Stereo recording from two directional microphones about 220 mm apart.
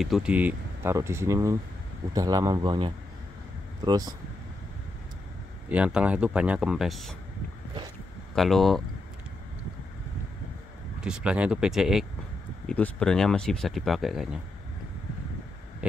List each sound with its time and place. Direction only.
0.0 s speech: centre (ahead or behind)
5.7 s speech: 5° right (ahead or behind)
8.4 s speech: centre (ahead or behind)
11.0 s speech: 5° right (ahead or behind)